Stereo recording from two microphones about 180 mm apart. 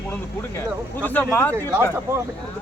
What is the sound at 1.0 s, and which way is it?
Speech, 10° left (ahead or behind).